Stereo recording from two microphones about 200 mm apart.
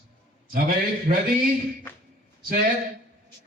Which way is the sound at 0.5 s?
45° right (ahead or behind).